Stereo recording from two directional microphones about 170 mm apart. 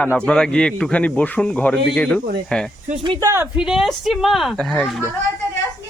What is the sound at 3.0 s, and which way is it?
Speech, 25° right (ahead or behind).